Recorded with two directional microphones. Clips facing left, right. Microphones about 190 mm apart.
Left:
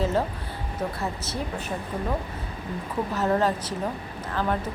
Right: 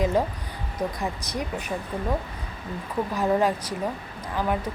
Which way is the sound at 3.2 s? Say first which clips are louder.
Right 1 dB; 10° right (ahead or behind).